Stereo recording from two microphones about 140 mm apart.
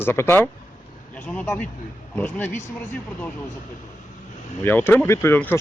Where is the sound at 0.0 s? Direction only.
15° left (ahead or behind).